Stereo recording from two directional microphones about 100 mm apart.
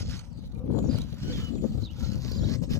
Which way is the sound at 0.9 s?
30° left (ahead or behind).